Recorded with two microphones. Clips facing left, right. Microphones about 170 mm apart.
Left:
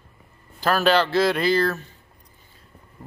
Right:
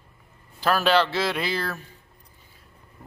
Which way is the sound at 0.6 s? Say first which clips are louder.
Left 1 dB; centre (ahead or behind).